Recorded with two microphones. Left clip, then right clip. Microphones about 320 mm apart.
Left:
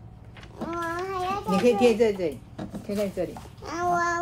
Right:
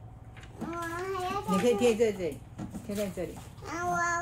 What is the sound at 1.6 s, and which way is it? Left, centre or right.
Speech, left.